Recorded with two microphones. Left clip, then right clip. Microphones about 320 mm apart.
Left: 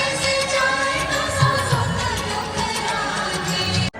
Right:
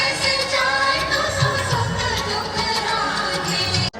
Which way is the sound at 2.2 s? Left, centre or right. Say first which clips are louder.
Right 1 dB; centre.